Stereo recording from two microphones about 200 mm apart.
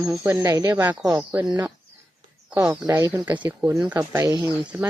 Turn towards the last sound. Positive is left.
turn(degrees=-10)  # may be behind; listen again after turning